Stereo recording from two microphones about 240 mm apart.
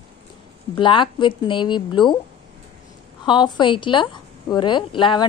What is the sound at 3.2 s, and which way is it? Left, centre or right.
A woman's voice, centre.